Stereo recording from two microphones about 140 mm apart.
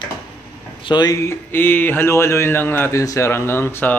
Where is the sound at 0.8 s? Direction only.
30° left (ahead or behind); by 4.0 s 15° left (ahead or behind).